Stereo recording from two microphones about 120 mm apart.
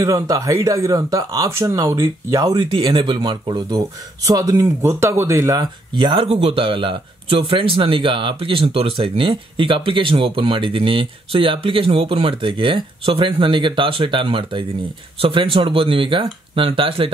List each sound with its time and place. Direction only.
0.0 s speech: 30° right (ahead or behind)
2.5 s speech: 40° right (ahead or behind)
5.9 s speech: 40° right (ahead or behind)
6.2 s speech: 55° right (ahead or behind)